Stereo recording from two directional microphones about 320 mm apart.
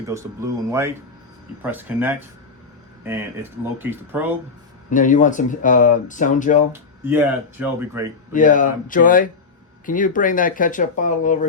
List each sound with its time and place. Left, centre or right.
0.1 s speech: centre
4.9 s speech: left
7.0 s speech: centre
8.3 s speech: left